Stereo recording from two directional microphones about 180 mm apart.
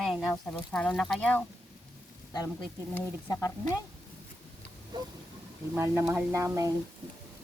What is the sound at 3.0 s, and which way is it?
Speech, 15° left (ahead or behind).